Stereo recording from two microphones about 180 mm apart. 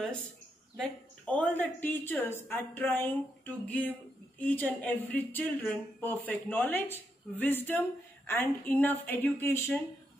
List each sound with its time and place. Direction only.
1.2 s speech: 5° left (ahead or behind)